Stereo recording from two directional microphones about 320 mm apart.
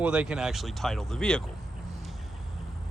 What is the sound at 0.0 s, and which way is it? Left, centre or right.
Speech, centre.